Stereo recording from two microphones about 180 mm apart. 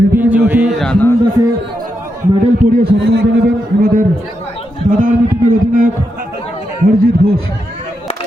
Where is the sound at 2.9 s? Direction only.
70° right (ahead or behind).